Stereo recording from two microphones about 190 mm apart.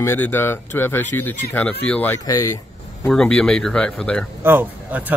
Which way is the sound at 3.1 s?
5° left (ahead or behind).